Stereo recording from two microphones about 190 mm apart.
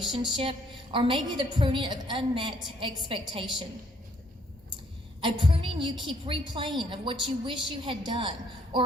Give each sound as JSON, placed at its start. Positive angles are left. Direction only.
{"t": 0.0, "sound": "a woman's voice", "side_deg": -25}
{"t": 5.2, "sound": "a woman's voice", "side_deg": -25}
{"t": 8.7, "sound": "a sound", "side_deg": -25}